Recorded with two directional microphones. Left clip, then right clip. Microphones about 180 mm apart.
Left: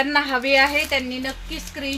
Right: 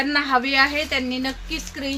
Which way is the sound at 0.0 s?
10° right (ahead or behind).